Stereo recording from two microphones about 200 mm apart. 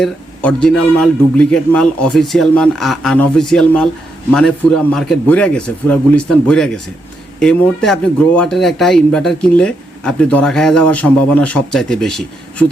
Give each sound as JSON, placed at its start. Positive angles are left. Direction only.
{"t": 0.0, "sound": "speech", "side_deg": 5}